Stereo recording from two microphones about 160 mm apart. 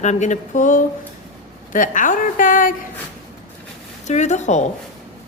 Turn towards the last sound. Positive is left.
turn(degrees=45)  # may be behind; listen again after turning